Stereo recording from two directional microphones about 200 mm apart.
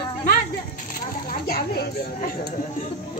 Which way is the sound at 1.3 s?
50° left (ahead or behind).